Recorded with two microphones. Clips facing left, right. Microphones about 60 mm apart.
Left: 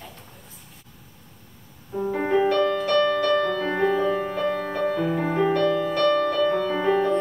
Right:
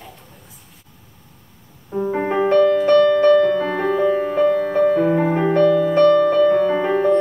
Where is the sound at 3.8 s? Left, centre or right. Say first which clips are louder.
Right 4 dB; centre.